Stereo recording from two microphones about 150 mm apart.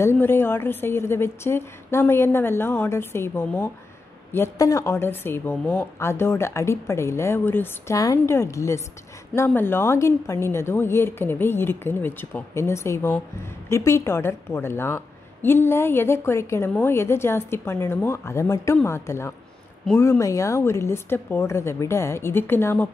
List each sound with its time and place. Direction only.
0.0 s a woman's voice: 15° left (ahead or behind)